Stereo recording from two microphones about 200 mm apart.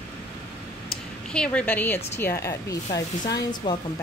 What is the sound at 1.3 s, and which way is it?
Speech, 5° left (ahead or behind).